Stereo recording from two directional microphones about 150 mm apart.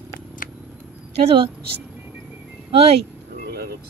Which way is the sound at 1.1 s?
45° right (ahead or behind).